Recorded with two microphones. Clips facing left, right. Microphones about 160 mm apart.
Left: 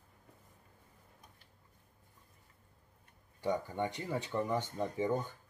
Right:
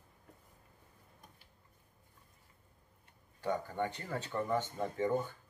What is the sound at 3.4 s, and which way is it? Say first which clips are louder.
Speech: left 1 dB; 15° left (ahead or behind).